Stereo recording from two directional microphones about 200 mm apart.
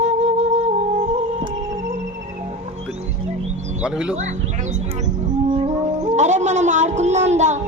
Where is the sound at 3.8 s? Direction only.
5° right (ahead or behind).